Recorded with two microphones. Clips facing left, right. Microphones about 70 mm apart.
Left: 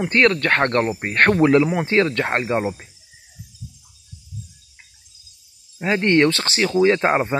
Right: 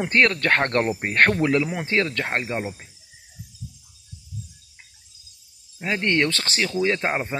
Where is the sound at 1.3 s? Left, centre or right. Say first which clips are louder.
Left 6 dB; left.